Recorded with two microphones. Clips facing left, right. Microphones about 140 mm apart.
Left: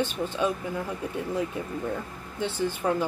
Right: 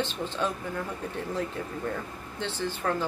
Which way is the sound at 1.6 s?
15° left (ahead or behind).